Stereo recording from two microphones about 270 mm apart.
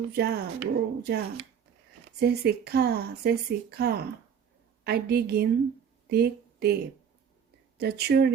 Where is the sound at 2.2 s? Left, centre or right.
Right.